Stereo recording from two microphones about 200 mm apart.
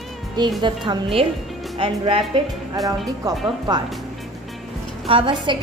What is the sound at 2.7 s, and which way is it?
Speech, centre (ahead or behind).